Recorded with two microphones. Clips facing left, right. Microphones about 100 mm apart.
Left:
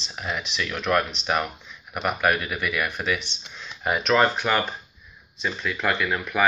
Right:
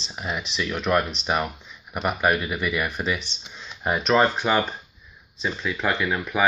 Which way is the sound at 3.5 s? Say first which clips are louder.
Even; 20° right (ahead or behind).